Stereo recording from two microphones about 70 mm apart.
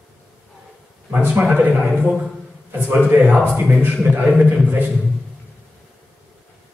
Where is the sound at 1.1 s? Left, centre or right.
Right.